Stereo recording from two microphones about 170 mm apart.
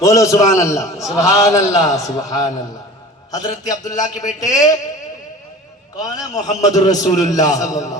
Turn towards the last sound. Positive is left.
turn(degrees=20)  # may be behind; listen again after turning